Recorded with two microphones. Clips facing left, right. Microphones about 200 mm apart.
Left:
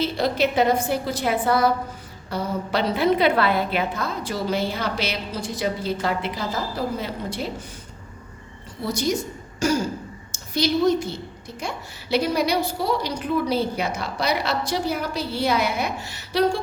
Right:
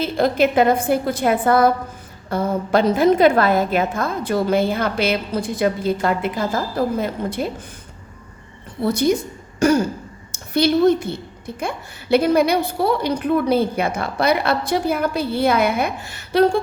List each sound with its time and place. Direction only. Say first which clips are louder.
0.0 s a woman's voice: right 4 dB; 50° right (ahead or behind)
8.8 s a woman's voice: right 6 dB; 55° right (ahead or behind)